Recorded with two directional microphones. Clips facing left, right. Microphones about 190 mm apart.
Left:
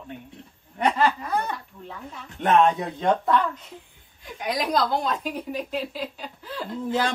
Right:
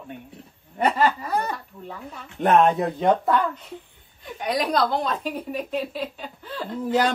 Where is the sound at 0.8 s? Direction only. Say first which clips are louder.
Right 1 dB; 5° right (ahead or behind).